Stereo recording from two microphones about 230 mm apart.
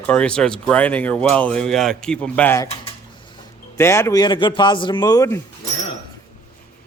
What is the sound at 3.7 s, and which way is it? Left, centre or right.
Speech, centre.